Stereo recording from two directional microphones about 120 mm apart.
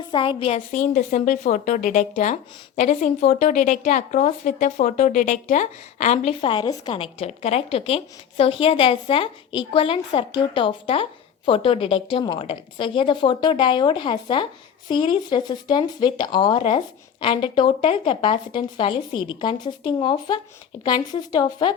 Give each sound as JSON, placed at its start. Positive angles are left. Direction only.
{"t": 0.1, "sound": "a woman's voice", "side_deg": 45}
{"t": 0.5, "sound": "a woman's voice", "side_deg": 90}
{"t": 6.4, "sound": "speech", "side_deg": 40}
{"t": 6.9, "sound": "a woman's voice", "side_deg": 50}